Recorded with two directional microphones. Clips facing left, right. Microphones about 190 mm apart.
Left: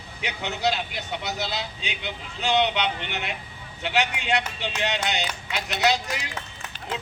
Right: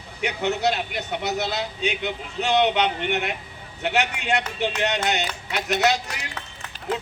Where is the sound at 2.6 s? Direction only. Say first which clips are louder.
Right 4 dB; 50° right (ahead or behind).